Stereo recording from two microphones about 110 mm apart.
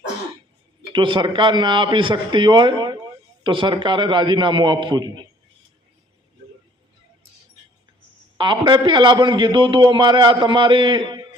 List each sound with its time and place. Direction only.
0.9 s a man's voice: 50° right (ahead or behind)
8.4 s a man's voice: 45° right (ahead or behind)